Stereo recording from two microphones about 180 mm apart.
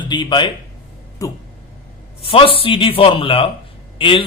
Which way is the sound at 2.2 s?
30° left (ahead or behind).